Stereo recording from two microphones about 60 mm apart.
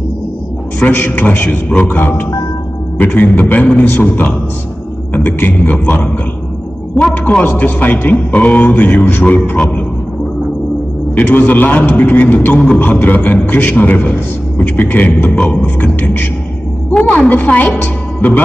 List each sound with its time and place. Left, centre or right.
0.9 s a man's voice: left
7.2 s a man's voice: left
11.1 s a man's voice: left
12.5 s music: centre
12.8 s a man's voice: left